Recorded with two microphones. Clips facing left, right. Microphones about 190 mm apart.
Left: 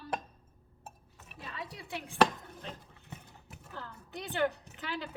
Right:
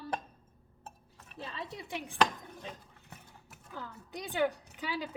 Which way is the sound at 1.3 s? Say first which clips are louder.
Right 2 dB; 25° right (ahead or behind).